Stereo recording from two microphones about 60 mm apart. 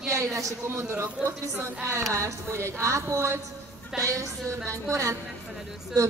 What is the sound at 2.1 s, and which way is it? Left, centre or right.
Speech, right.